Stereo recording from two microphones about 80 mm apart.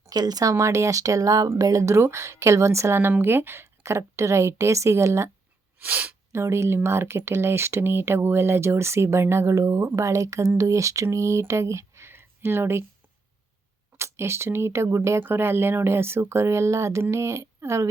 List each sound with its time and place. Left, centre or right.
0.0 s speech: right
5.8 s speech: right
6.3 s speech: right
13.9 s speech: right